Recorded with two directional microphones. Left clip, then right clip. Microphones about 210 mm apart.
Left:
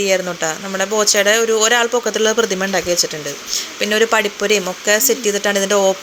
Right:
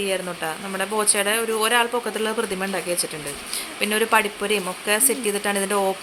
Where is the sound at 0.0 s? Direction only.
20° left (ahead or behind).